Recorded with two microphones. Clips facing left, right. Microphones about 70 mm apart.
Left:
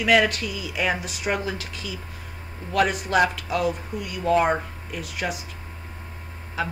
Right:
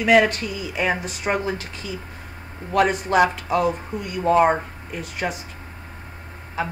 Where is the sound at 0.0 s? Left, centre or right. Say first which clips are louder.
Right 3 dB; right.